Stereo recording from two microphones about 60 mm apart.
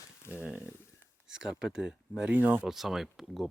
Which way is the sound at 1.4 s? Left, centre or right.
Centre.